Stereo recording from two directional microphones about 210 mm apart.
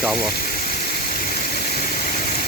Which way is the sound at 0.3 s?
45° left (ahead or behind).